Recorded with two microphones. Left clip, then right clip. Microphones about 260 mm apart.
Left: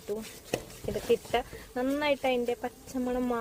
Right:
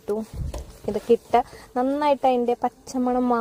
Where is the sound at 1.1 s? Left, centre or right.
Right.